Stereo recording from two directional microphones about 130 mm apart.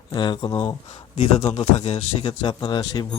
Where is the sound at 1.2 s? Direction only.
60° left (ahead or behind); by 3.0 s 30° left (ahead or behind).